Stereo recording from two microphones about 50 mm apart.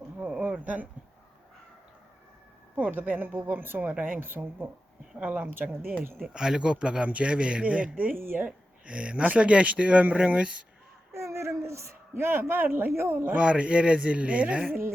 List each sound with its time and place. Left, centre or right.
0.2 s speech: right
2.9 s speech: right
5.2 s speech: right
6.1 s speech: centre; by 8.1 s right
8.1 s speech: right
8.4 s speech: right
11.1 s speech: right
13.2 s speech: right